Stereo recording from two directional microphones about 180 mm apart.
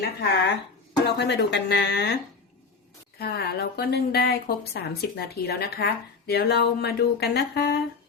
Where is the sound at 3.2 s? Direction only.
60° left (ahead or behind).